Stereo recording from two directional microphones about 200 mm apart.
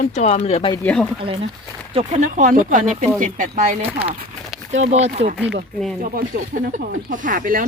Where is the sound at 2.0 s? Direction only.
40° right (ahead or behind).